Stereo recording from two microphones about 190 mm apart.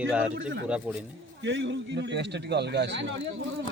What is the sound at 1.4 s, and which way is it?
A man's voice, 70° right (ahead or behind).